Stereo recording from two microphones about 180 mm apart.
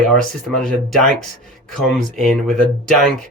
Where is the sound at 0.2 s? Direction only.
Centre (ahead or behind).